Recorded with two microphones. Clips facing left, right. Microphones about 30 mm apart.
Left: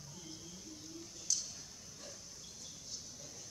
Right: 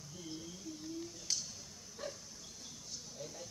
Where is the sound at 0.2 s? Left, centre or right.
Centre.